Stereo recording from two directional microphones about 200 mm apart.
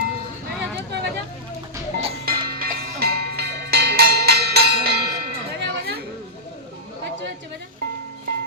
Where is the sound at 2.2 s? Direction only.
50° right (ahead or behind).